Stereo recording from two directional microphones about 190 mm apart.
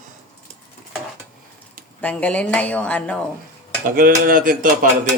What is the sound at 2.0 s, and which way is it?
A woman's voice, 5° left (ahead or behind).